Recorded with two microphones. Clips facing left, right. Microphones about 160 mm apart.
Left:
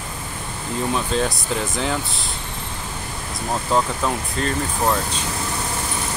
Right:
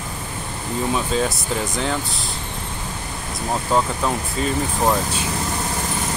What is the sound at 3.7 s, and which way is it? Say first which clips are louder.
Speech: even; 5° right (ahead or behind).